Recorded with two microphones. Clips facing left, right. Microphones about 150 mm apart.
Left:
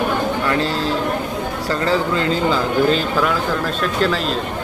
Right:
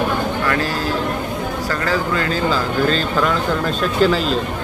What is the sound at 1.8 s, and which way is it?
Speech, 25° left (ahead or behind).